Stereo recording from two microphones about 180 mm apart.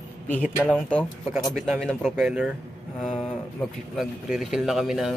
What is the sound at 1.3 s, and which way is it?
Speech, centre (ahead or behind).